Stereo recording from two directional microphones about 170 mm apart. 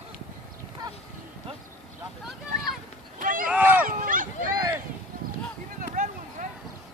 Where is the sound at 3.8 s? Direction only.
55° right (ahead or behind).